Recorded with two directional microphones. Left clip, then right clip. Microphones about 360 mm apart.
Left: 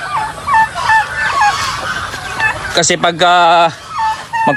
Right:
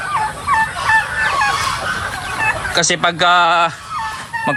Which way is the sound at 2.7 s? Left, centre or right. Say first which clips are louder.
Left 3 dB; centre.